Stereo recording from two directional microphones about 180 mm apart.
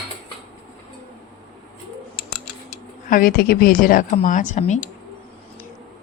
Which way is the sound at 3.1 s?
55° left (ahead or behind).